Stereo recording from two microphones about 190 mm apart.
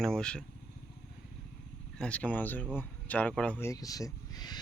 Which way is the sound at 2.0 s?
5° left (ahead or behind).